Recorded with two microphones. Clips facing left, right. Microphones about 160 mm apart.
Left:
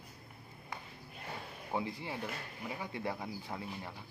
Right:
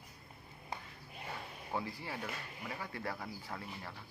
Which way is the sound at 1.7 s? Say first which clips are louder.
Left 3 dB; 20° left (ahead or behind).